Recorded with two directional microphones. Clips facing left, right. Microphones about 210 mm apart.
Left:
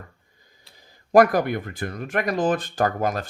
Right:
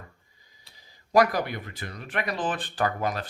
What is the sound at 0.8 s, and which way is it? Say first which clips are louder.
Speech: left 5 dB; 50° left (ahead or behind).